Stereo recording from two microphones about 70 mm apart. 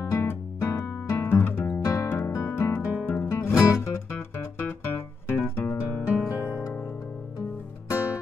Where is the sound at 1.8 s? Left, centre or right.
Left.